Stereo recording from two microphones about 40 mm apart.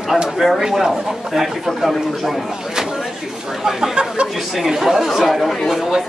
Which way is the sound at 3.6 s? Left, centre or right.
Centre.